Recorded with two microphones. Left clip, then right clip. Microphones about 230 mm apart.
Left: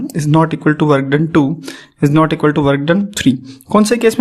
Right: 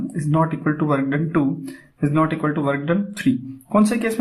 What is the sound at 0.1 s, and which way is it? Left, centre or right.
Speech, left.